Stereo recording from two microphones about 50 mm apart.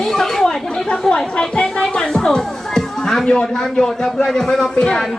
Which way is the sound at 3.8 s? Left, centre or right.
Centre.